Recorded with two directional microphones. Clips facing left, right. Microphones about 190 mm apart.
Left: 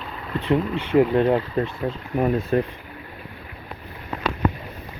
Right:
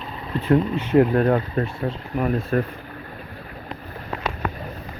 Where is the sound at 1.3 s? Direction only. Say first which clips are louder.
Even; 20° left (ahead or behind).